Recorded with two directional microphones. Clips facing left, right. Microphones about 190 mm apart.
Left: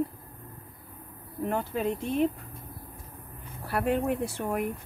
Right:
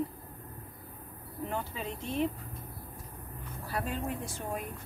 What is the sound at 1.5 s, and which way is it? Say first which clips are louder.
Speech: left 9 dB; 50° left (ahead or behind).